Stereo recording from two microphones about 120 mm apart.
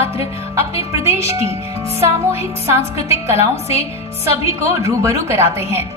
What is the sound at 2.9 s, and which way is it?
A woman's voice, 60° left (ahead or behind).